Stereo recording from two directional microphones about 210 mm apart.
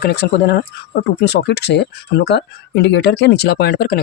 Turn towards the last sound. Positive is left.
turn(degrees=45)  # may be behind; listen again after turning